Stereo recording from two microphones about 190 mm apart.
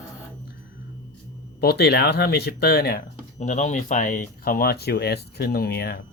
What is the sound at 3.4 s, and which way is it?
Speech, 40° left (ahead or behind).